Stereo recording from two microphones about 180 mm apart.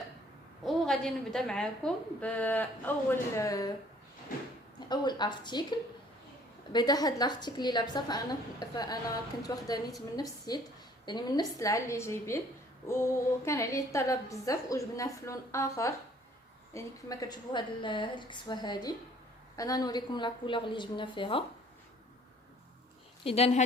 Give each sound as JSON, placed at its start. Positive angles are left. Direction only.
{"t": 0.6, "sound": "a woman's voice", "side_deg": 0}
{"t": 4.9, "sound": "a woman's voice", "side_deg": 25}
{"t": 23.2, "sound": "speech", "side_deg": 35}